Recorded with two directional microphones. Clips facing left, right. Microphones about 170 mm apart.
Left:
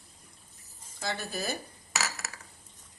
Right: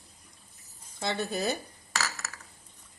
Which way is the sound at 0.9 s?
20° right (ahead or behind).